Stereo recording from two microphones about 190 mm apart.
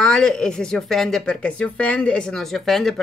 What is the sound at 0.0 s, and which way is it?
Speech, 5° left (ahead or behind).